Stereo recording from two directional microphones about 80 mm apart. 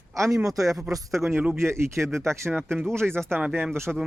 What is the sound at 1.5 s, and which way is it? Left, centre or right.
Speech, right.